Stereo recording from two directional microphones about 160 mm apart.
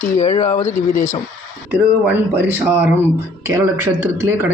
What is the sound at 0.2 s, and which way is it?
Speech, 45° left (ahead or behind).